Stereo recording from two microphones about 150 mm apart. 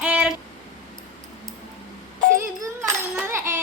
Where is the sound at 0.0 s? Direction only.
10° right (ahead or behind).